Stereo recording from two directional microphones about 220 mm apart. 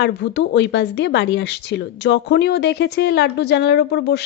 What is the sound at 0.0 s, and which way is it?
Speech, 50° left (ahead or behind).